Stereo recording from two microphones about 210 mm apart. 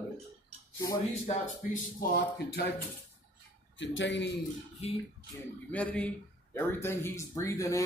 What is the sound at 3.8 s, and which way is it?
Speech, 60° left (ahead or behind).